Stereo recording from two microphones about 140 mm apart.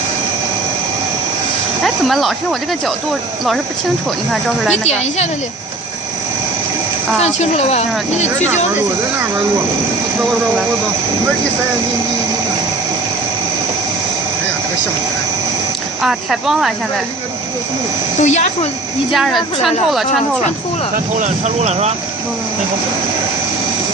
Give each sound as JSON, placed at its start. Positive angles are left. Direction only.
{"t": 1.8, "sound": "speech", "side_deg": 0}
{"t": 4.3, "sound": "speech", "side_deg": 0}
{"t": 4.9, "sound": "speech", "side_deg": 50}
{"t": 7.3, "sound": "speech", "side_deg": 50}
{"t": 16.0, "sound": "speech", "side_deg": 0}
{"t": 18.2, "sound": "speech", "side_deg": 55}
{"t": 19.1, "sound": "speech", "side_deg": 0}
{"t": 20.9, "sound": "speech", "side_deg": -60}